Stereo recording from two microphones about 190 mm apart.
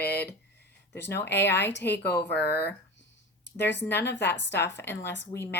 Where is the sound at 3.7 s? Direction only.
10° left (ahead or behind).